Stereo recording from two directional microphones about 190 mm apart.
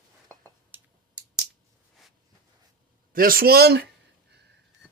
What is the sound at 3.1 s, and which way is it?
Speech, 50° right (ahead or behind).